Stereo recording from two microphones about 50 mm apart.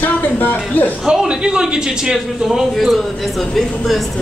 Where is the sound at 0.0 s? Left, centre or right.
Left.